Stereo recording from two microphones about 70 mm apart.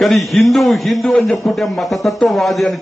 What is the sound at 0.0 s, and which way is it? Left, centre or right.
A man's voice, centre.